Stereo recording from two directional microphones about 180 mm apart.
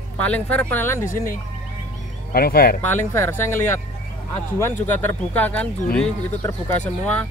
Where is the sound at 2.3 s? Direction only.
55° left (ahead or behind).